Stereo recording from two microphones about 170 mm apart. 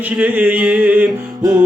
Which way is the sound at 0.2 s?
10° right (ahead or behind).